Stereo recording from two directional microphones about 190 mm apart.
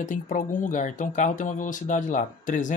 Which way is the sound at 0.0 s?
40° left (ahead or behind).